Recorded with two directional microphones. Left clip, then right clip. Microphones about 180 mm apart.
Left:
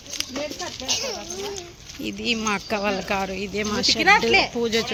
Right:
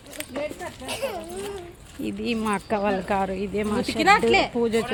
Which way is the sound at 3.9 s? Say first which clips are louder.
Left 1 dB; 65° right (ahead or behind).